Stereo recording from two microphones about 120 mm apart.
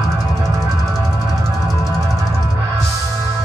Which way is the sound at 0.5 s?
30° right (ahead or behind).